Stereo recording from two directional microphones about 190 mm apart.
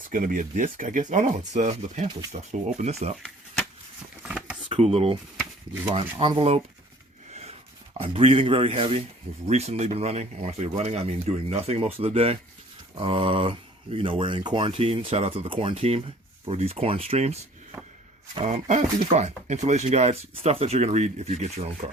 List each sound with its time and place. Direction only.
0.1 s speech: 45° right (ahead or behind)
4.2 s a sound: 5° right (ahead or behind)
4.7 s speech: 30° right (ahead or behind)
7.9 s speech: 30° right (ahead or behind)